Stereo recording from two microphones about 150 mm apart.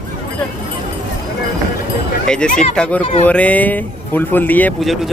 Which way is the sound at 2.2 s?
5° left (ahead or behind).